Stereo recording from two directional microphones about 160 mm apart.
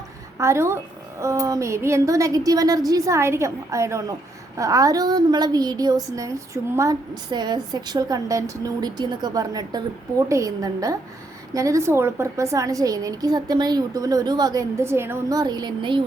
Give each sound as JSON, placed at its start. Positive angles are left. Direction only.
{"t": 0.3, "sound": "a woman's voice", "side_deg": -15}